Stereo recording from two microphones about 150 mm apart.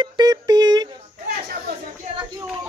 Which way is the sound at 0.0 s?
25° right (ahead or behind).